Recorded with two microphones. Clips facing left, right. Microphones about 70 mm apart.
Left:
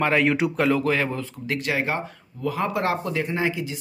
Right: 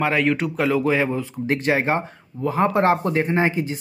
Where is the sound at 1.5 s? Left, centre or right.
Right.